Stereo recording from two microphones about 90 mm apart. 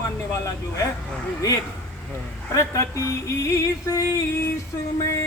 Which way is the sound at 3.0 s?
35° left (ahead or behind).